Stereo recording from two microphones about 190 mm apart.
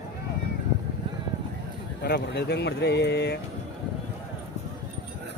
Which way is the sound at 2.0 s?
60° left (ahead or behind).